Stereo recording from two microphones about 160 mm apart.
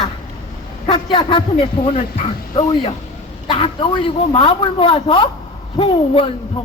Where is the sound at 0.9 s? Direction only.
30° left (ahead or behind).